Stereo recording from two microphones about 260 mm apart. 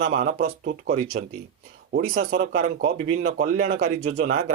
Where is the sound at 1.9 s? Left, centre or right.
Right.